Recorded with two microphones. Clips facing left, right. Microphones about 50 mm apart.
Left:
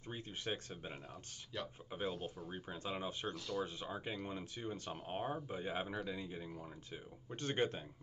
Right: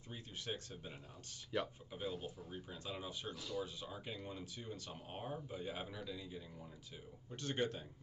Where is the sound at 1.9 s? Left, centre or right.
Left.